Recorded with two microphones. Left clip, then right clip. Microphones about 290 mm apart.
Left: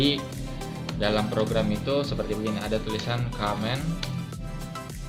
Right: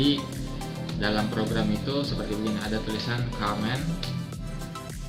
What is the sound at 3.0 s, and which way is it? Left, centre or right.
Speech, left.